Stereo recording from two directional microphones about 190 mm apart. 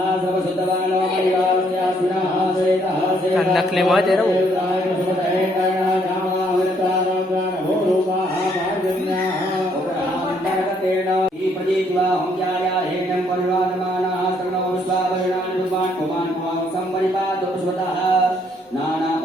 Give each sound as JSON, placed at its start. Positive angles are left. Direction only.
{"t": 3.3, "sound": "a man's voice", "side_deg": 0}